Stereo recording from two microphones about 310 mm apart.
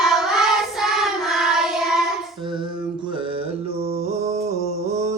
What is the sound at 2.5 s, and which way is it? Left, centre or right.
Mantra, centre.